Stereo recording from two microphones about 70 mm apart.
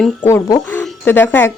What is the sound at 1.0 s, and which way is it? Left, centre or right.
Speech, left.